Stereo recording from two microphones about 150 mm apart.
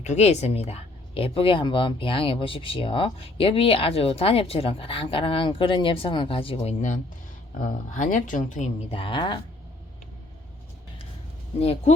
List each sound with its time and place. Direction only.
0.0 s speech: 50° left (ahead or behind)
7.6 s speech: 60° left (ahead or behind)
8.9 s speech: 35° left (ahead or behind)
11.6 s speech: 45° left (ahead or behind)